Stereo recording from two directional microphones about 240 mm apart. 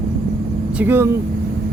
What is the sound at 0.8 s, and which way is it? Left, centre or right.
Speech, centre.